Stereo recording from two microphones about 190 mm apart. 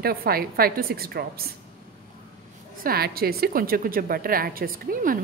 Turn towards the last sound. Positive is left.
turn(degrees=-45)  # may be behind; listen again after turning